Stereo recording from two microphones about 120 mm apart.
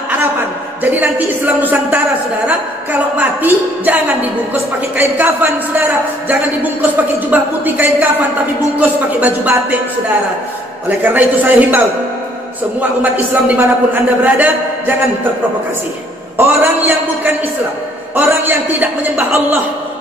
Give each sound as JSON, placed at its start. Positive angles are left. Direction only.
{"t": 0.2, "sound": "a sound", "side_deg": -15}
{"t": 2.4, "sound": "a man's voice", "side_deg": -15}
{"t": 10.9, "sound": "a man's voice", "side_deg": -15}
{"t": 13.0, "sound": "a man's voice", "side_deg": -15}
{"t": 16.3, "sound": "a man's voice", "side_deg": -20}